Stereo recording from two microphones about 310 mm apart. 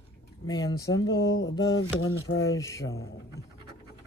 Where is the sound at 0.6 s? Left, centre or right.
Centre.